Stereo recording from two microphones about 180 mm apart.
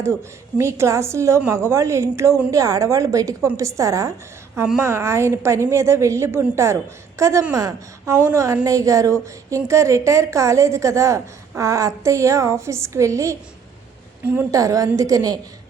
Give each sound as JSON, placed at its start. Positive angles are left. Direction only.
{"t": 0.6, "sound": "a woman's voice", "side_deg": -15}